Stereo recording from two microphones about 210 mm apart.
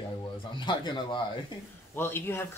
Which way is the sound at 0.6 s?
20° left (ahead or behind).